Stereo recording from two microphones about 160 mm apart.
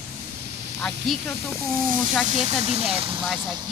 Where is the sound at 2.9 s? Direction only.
35° right (ahead or behind).